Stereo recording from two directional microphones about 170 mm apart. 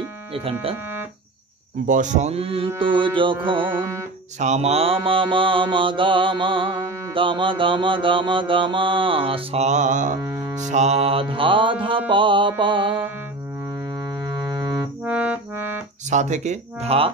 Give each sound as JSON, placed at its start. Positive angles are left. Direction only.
{"t": 0.3, "sound": "music", "side_deg": -35}
{"t": 1.9, "sound": "music", "side_deg": -45}
{"t": 2.8, "sound": "mantra", "side_deg": -30}
{"t": 3.6, "sound": "music", "side_deg": -15}
{"t": 4.4, "sound": "mantra", "side_deg": -40}
{"t": 10.2, "sound": "music", "side_deg": -15}
{"t": 10.6, "sound": "music", "side_deg": -45}
{"t": 12.1, "sound": "mantra", "side_deg": -30}
{"t": 14.2, "sound": "music", "side_deg": -25}
{"t": 15.0, "sound": "music", "side_deg": -10}
{"t": 16.1, "sound": "speech", "side_deg": -45}